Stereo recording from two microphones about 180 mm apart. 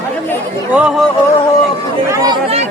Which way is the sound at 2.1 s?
20° right (ahead or behind).